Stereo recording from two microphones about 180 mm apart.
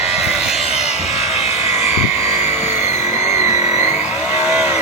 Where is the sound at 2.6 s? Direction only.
40° left (ahead or behind).